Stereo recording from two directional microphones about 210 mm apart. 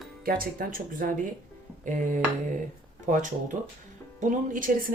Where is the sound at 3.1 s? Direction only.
35° right (ahead or behind).